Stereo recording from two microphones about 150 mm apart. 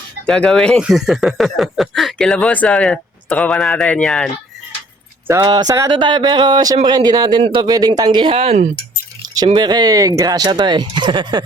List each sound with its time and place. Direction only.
0.3 s speech: 5° left (ahead or behind)
5.3 s speech: 25° right (ahead or behind); by 8.7 s 45° right (ahead or behind)
9.6 s speech: 30° right (ahead or behind)